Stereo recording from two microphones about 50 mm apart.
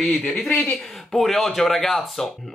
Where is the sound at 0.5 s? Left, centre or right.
Left.